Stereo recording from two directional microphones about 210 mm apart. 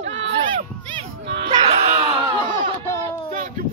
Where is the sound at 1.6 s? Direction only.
30° right (ahead or behind).